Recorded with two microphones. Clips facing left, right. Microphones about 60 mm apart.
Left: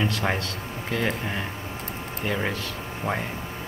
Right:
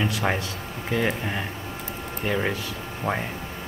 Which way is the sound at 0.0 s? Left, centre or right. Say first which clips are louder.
Right 1 dB; centre.